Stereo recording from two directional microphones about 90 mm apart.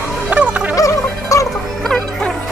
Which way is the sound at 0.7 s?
40° left (ahead or behind).